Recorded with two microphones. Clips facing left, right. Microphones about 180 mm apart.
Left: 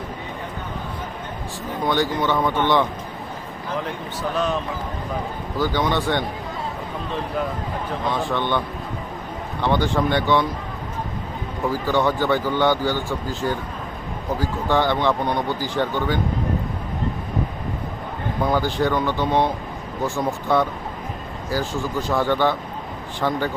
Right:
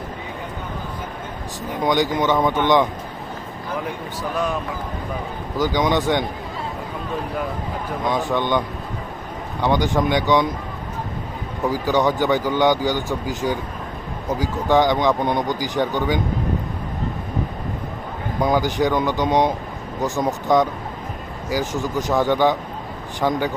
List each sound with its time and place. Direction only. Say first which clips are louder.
1.8 s speech: right 2 dB; 15° right (ahead or behind)
4.2 s speech: left 1 dB; 10° right (ahead or behind)
5.5 s speech: right 2 dB; 15° right (ahead or behind)
8.3 s speech: right 2 dB; 15° right (ahead or behind)
11.6 s speech: right 2 dB; 15° right (ahead or behind)
18.4 s speech: right 2 dB; 15° right (ahead or behind)